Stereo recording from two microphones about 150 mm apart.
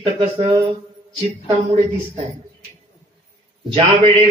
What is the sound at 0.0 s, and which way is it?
Speech, 40° right (ahead or behind).